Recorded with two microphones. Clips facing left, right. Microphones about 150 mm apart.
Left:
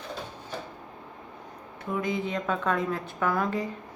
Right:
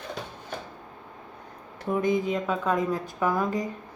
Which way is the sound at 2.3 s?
10° right (ahead or behind).